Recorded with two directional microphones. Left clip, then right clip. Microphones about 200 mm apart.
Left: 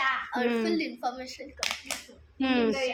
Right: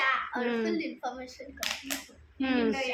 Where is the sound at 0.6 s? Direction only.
50° left (ahead or behind).